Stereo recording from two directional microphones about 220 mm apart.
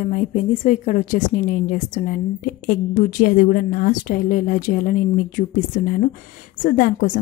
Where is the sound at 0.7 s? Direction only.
35° left (ahead or behind).